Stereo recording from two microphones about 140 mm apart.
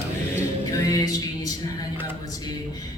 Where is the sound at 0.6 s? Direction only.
25° left (ahead or behind).